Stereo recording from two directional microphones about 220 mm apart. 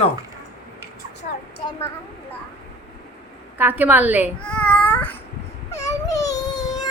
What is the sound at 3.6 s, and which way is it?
Speech, 10° right (ahead or behind).